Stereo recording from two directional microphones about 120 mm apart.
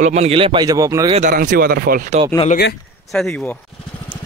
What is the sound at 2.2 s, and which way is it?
Speech, 55° right (ahead or behind).